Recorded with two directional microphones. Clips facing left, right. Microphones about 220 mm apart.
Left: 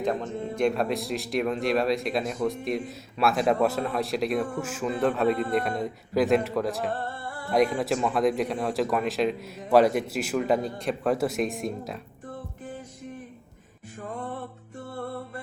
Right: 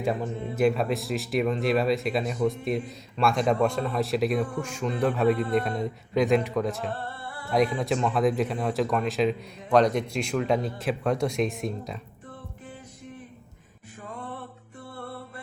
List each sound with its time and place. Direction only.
0.0 s speech: 5° right (ahead or behind)
6.9 s music: 45° left (ahead or behind)
7.8 s speech: centre (ahead or behind)